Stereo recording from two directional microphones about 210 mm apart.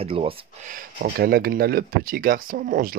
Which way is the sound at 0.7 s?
45° right (ahead or behind).